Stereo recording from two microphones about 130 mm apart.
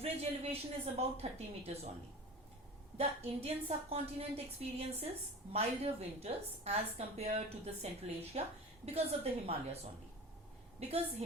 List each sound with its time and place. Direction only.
0.0 s a woman's voice: 50° right (ahead or behind)
3.0 s a woman's voice: 50° right (ahead or behind)
10.8 s a woman's voice: 55° right (ahead or behind)